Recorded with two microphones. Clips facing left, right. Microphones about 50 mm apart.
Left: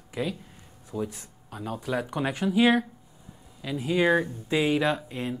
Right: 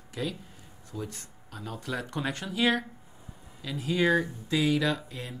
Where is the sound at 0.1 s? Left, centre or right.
Centre.